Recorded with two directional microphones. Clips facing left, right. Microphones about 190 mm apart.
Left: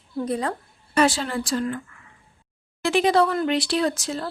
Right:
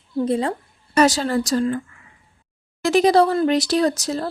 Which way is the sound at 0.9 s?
40° right (ahead or behind).